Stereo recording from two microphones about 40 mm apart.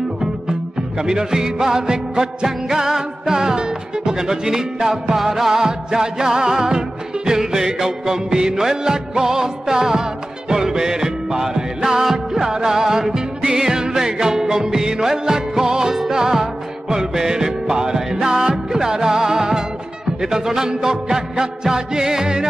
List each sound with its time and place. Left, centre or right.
0.2 s music: centre